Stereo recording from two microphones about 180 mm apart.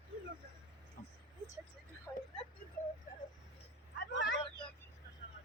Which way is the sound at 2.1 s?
15° left (ahead or behind).